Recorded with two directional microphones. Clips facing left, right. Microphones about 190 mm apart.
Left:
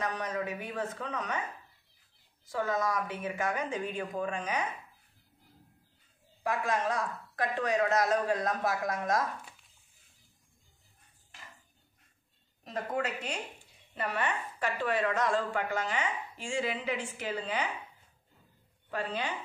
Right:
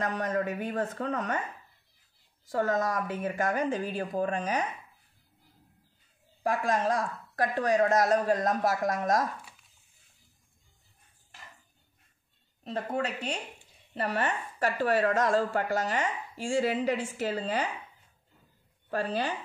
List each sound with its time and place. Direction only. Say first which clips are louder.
0.0 s speech: right 4 dB; 50° right (ahead or behind)
2.5 s a woman's voice: right 3 dB; 45° right (ahead or behind)
6.4 s speech: right 3 dB; 45° right (ahead or behind)
12.6 s a woman's voice: right 2 dB; 30° right (ahead or behind)
18.9 s a woman's voice: right 4 dB; 40° right (ahead or behind)